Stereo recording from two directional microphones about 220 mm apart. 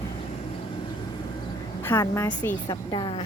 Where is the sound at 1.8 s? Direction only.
10° left (ahead or behind).